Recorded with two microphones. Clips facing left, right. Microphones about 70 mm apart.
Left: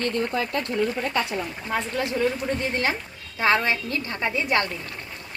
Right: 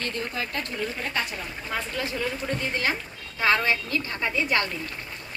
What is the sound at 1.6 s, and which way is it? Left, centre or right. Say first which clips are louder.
Speech: left 2 dB; left.